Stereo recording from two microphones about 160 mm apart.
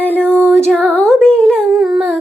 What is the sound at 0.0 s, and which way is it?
Music, 10° left (ahead or behind).